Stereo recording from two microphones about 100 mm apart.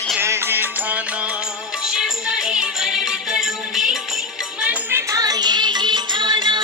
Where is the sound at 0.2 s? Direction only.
25° right (ahead or behind); by 4.2 s 5° right (ahead or behind).